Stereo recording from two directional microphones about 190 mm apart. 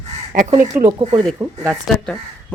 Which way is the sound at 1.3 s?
15° right (ahead or behind).